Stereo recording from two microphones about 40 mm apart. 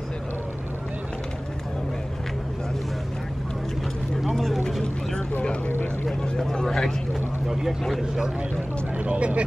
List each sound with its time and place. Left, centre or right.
4.4 s vehicle: centre
6.5 s vehicle: centre
8.9 s speech: right